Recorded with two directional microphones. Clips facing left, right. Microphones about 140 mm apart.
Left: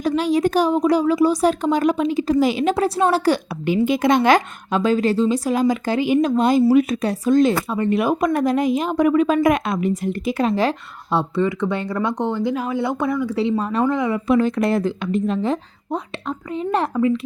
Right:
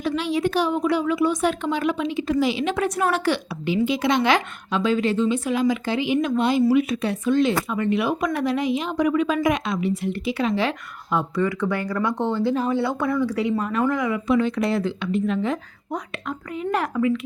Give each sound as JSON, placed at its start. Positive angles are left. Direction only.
{"t": 0.0, "sound": "a woman's voice", "side_deg": 40}
{"t": 14.3, "sound": "a woman's voice", "side_deg": 45}